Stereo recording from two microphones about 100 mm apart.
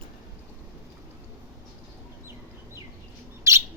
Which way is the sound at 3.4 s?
30° right (ahead or behind).